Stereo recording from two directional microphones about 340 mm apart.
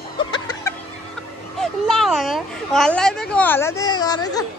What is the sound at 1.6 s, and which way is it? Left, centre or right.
A child's voice, centre.